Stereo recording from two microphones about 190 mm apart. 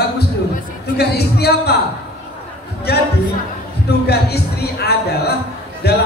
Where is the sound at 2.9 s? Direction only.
60° left (ahead or behind).